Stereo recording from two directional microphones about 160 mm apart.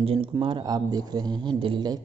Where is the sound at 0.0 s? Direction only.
35° right (ahead or behind).